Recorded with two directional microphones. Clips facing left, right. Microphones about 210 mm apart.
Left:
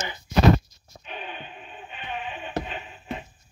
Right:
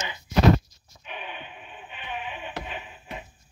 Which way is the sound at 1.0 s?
40° left (ahead or behind).